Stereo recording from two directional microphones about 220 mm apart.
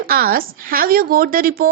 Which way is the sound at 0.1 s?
40° right (ahead or behind).